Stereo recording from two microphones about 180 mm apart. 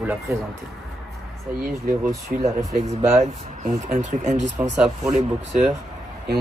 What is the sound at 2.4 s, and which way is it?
Speech, 40° right (ahead or behind).